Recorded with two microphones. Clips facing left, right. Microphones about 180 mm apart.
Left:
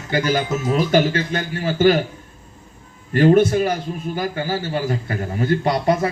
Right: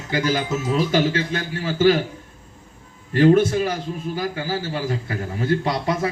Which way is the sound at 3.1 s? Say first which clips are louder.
Left 1 dB; 55° left (ahead or behind).